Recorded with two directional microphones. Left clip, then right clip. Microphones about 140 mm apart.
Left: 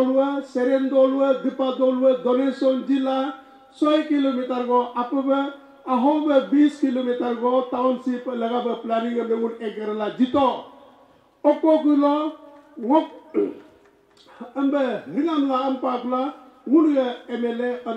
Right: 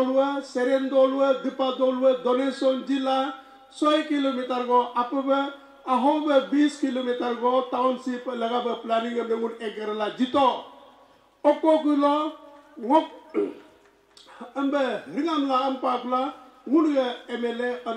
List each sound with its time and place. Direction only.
0.0 s speech: 10° left (ahead or behind)